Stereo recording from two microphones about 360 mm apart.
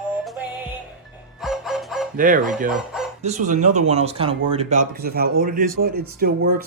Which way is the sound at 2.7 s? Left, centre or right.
Centre.